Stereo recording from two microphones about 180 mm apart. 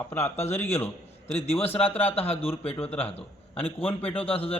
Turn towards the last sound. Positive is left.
turn(degrees=30)  # may be behind; listen again after turning